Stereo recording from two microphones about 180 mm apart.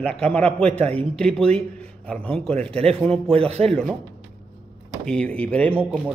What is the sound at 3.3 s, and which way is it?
Speech, 35° right (ahead or behind).